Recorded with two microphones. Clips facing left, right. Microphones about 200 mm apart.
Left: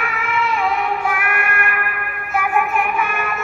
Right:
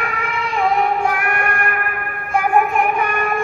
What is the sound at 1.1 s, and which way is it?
Child singing, 40° right (ahead or behind).